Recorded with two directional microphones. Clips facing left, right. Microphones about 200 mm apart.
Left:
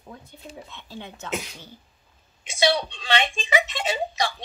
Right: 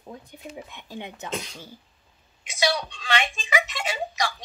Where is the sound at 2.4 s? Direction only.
30° left (ahead or behind).